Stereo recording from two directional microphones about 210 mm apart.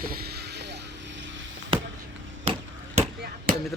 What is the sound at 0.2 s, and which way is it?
Vehicle, 50° right (ahead or behind).